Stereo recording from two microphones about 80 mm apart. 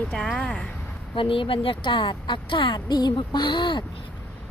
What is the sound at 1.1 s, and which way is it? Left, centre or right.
Speech, left.